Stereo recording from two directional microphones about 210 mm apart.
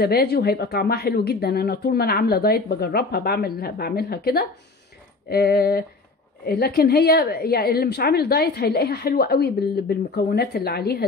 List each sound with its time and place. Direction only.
0.0 s a woman's voice: 50° left (ahead or behind)